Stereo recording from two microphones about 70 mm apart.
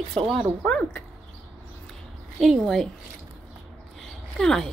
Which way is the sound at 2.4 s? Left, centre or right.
Centre.